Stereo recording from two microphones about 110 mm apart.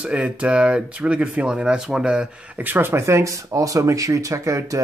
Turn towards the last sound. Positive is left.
turn(degrees=-30)  # may be behind; listen again after turning